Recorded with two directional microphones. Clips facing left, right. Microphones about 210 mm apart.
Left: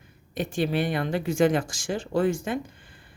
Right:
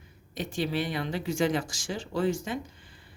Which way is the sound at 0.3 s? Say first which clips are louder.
Left 4 dB; 55° left (ahead or behind).